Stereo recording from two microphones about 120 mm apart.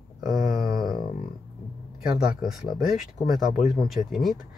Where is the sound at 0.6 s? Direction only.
30° right (ahead or behind).